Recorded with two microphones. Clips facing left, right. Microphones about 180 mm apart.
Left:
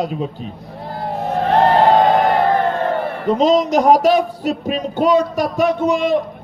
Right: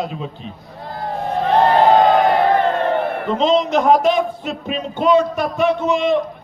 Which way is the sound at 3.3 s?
40° left (ahead or behind).